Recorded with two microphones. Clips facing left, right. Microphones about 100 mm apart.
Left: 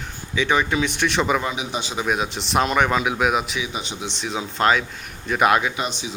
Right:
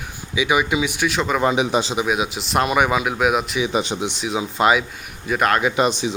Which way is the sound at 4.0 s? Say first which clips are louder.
Right 4 dB; 10° right (ahead or behind).